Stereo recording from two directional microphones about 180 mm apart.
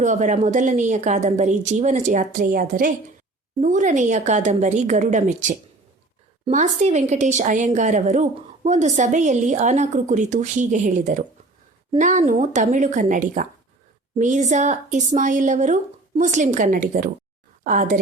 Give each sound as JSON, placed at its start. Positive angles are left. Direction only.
{"t": 0.0, "sound": "a woman's voice", "side_deg": -40}